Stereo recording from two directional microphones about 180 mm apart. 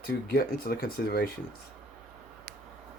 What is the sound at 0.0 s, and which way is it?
Speech, 55° left (ahead or behind).